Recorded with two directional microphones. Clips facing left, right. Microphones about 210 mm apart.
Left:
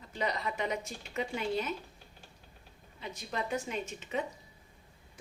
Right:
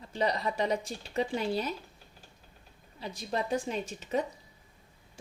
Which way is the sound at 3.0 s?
35° right (ahead or behind).